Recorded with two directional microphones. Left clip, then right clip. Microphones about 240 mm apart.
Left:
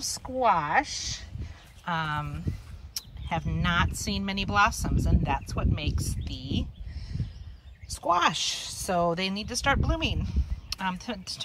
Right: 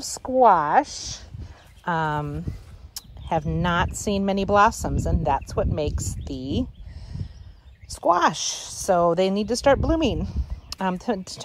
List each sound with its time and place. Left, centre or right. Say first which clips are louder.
0.0 s speech: right 8 dB; centre